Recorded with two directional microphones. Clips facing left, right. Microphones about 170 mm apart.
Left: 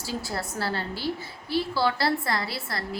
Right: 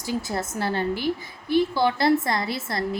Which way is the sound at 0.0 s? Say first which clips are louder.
Right 4 dB; 20° right (ahead or behind).